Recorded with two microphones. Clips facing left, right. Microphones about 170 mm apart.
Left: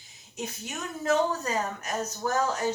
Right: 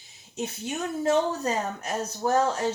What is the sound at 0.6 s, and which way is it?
Speech, 30° right (ahead or behind).